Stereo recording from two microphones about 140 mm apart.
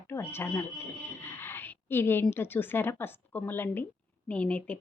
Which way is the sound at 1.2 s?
15° left (ahead or behind).